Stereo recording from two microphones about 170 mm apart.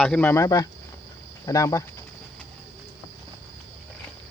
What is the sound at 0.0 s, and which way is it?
Speech, 10° left (ahead or behind).